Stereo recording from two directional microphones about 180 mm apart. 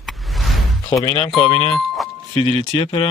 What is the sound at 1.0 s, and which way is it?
Speech, 25° left (ahead or behind).